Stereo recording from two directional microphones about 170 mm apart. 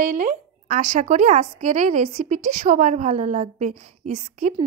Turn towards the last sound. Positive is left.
turn(degrees=-45)  # may be behind; listen again after turning